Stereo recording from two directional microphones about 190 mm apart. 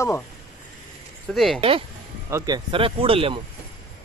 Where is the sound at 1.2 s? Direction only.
Centre (ahead or behind).